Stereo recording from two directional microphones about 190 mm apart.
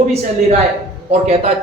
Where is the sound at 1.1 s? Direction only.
35° right (ahead or behind).